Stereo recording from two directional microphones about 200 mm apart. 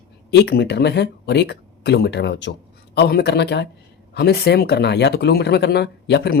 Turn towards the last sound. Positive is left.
turn(degrees=55)  # may be behind; listen again after turning